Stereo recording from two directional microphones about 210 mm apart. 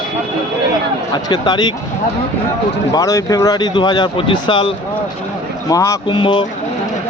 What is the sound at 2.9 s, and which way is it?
Speech, 15° left (ahead or behind).